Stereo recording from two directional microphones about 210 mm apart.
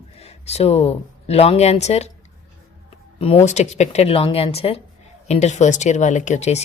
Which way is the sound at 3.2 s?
25° left (ahead or behind).